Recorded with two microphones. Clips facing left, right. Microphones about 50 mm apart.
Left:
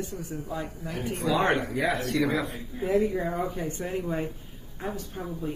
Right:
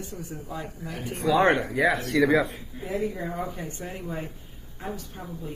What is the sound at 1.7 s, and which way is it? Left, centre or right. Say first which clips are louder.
Speech: right 4 dB; right.